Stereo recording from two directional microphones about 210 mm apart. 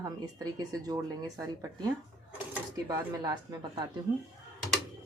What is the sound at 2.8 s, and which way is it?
Speech, 15° right (ahead or behind).